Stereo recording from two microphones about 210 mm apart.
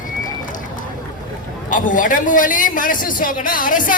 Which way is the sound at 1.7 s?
40° left (ahead or behind).